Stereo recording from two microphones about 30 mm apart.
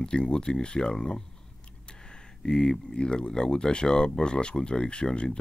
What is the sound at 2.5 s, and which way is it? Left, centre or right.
Speech, left.